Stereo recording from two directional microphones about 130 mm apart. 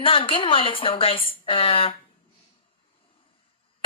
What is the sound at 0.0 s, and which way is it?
A woman's voice, 45° left (ahead or behind).